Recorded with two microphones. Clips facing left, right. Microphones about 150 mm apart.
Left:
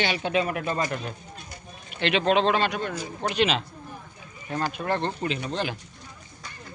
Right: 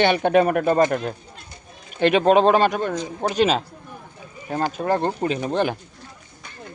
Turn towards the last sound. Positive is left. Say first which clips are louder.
# right 7 dB
turn(degrees=-50)  # may be behind; listen again after turning